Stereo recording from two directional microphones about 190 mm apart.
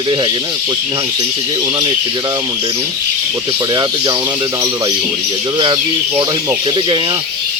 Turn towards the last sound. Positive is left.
turn(degrees=-25)  # may be behind; listen again after turning